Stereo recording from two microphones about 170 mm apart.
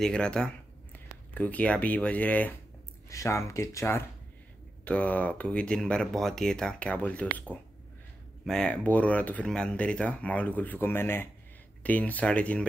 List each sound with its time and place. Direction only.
0.0 s speech: 5° left (ahead or behind)